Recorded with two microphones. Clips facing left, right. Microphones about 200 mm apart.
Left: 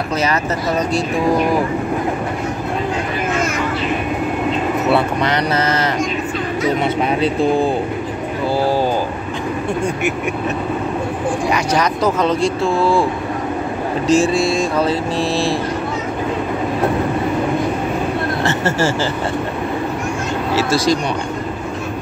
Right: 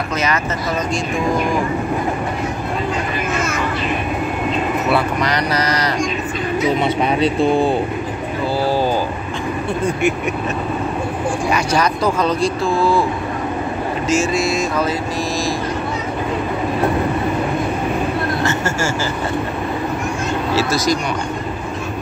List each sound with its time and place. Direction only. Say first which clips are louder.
0.9 s speech: left 3 dB; 35° left (ahead or behind)
4.9 s speech: left 2 dB; 25° left (ahead or behind)
11.5 s speech: even; 20° left (ahead or behind)
14.0 s speech: left 4 dB; 35° left (ahead or behind)
18.4 s a sound: left 2 dB; 30° left (ahead or behind)
20.5 s speech: left 3 dB; 30° left (ahead or behind)